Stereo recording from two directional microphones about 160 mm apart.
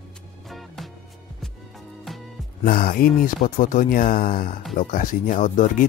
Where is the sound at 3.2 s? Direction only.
55° left (ahead or behind).